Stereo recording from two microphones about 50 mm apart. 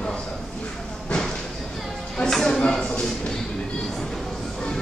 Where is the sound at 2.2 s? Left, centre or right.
Centre.